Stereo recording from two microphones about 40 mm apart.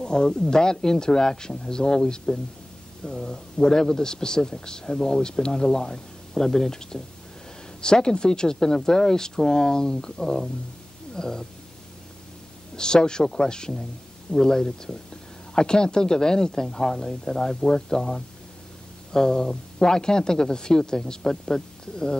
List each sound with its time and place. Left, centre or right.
0.0 s a man's voice: left
12.7 s a man's voice: centre